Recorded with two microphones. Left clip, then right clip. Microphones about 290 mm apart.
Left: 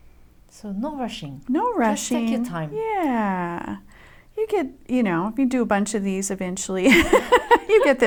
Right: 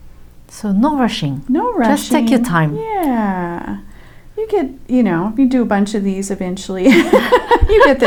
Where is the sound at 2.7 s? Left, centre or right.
Left.